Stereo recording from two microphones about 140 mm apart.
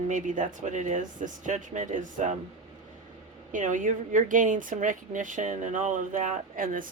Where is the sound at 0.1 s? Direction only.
65° right (ahead or behind).